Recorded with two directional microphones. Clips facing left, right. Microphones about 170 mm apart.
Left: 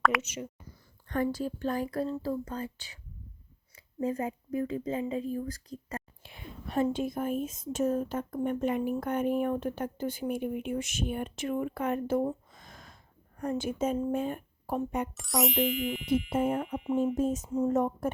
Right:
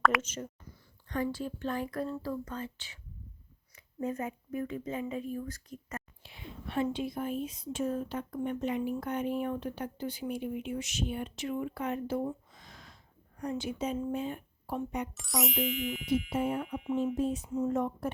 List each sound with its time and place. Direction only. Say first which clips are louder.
0.0 s a sound: even; centre (ahead or behind)
1.0 s speech: left 3 dB; 50° left (ahead or behind); by 6.0 s 35° left (ahead or behind)
6.2 s speech: left 1 dB; 50° left (ahead or behind)
15.1 s music: left 4 dB; centre (ahead or behind)
16.3 s speech: left 3 dB; 50° left (ahead or behind)